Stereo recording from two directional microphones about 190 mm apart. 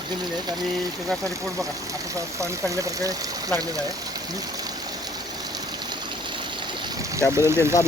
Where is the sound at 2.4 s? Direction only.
15° right (ahead or behind).